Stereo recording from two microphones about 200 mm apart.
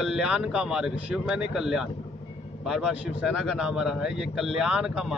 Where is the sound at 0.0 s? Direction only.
5° right (ahead or behind).